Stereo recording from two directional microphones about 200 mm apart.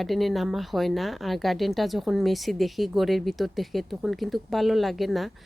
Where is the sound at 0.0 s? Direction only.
Centre (ahead or behind).